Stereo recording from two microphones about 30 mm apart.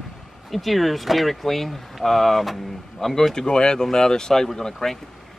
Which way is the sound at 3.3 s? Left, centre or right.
Left.